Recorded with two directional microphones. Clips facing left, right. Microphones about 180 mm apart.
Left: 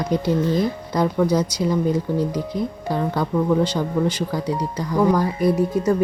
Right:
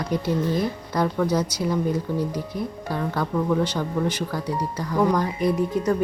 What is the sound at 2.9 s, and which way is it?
Speech, 15° left (ahead or behind).